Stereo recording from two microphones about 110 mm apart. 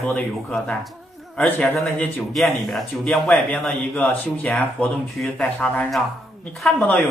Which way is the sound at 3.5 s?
15° left (ahead or behind).